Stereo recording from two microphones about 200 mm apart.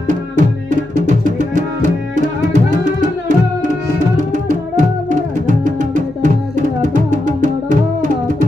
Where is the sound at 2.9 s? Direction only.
40° right (ahead or behind).